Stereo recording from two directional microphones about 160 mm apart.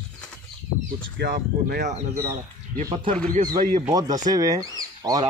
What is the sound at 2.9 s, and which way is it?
Speech, 35° right (ahead or behind).